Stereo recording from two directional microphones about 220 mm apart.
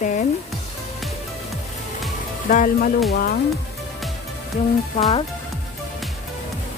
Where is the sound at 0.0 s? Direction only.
35° left (ahead or behind).